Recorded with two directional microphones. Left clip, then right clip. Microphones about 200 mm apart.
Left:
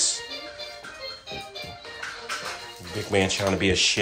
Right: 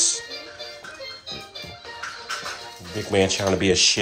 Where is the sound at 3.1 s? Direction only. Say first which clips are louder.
Right 3 dB; 10° right (ahead or behind).